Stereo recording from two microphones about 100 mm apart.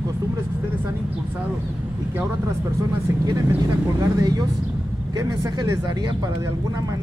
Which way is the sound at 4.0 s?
40° right (ahead or behind).